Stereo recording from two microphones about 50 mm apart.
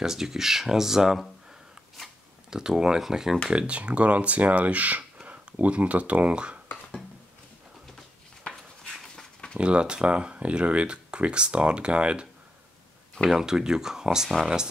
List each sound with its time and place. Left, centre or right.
0.0 s speech: centre
2.5 s speech: centre
3.4 s speech: right
8.5 s a sound: centre
9.6 s speech: right
13.3 s speech: centre